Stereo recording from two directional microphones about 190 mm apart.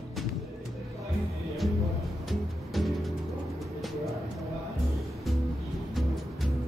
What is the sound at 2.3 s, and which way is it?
Music, centre (ahead or behind).